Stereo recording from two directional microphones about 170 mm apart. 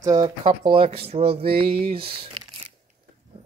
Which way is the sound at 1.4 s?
65° right (ahead or behind).